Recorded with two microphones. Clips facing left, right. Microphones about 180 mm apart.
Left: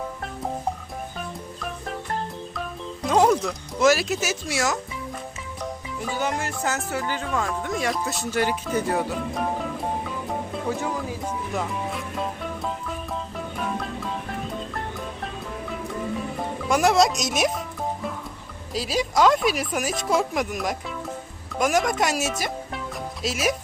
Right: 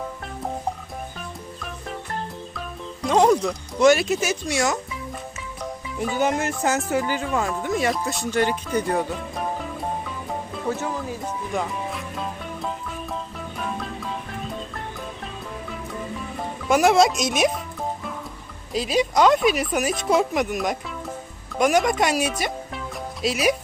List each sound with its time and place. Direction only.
3.0 s speech: centre (ahead or behind)
6.1 s music: 20° right (ahead or behind)
6.6 s speech: 15° right (ahead or behind); by 9.1 s 5° left (ahead or behind)
10.8 s speech: 10° left (ahead or behind)
13.6 s music: centre (ahead or behind)
16.6 s speech: centre (ahead or behind)
18.7 s speech: centre (ahead or behind)